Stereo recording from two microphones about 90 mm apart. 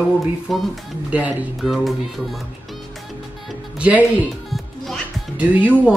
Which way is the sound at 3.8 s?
15° right (ahead or behind).